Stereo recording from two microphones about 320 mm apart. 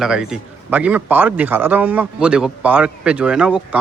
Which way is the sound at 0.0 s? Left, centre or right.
Centre.